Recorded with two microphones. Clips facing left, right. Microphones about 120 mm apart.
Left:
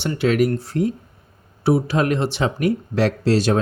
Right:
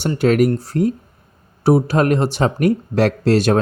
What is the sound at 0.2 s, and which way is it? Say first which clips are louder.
Speech: right 3 dB; 45° right (ahead or behind).